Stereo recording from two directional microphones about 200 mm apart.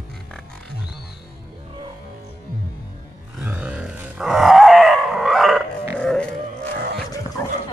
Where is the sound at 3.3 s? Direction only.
5° right (ahead or behind).